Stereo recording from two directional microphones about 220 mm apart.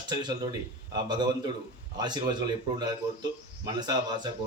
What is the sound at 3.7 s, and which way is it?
Speech, 20° right (ahead or behind).